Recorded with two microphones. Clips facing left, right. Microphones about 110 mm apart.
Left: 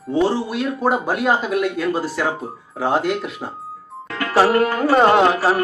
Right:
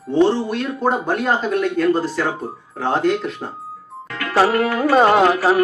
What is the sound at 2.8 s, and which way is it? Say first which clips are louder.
Music: right 1 dB; 5° left (ahead or behind).